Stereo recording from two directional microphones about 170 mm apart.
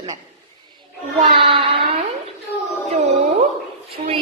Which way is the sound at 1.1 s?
30° right (ahead or behind).